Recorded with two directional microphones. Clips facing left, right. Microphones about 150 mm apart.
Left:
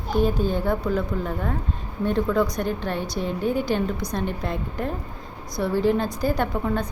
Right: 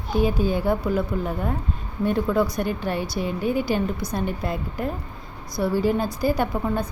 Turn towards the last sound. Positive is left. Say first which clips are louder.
# even
turn(degrees=-5)  # may be behind; listen again after turning